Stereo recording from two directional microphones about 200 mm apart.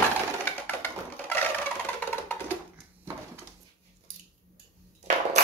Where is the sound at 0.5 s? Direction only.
10° left (ahead or behind).